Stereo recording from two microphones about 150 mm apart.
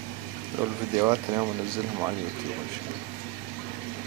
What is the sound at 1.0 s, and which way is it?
Speech, 15° right (ahead or behind).